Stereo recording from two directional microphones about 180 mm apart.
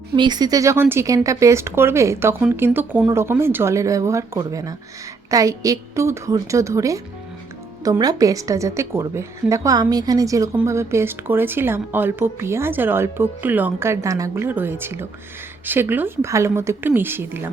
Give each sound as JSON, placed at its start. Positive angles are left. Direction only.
{"t": 0.2, "sound": "a woman's voice", "side_deg": -25}